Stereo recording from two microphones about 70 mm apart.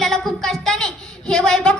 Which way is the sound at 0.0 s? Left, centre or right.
Centre.